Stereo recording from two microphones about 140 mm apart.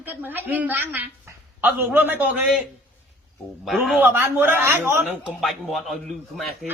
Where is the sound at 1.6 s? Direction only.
10° right (ahead or behind).